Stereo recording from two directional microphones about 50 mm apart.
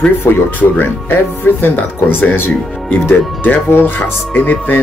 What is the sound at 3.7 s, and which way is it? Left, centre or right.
Speech, left.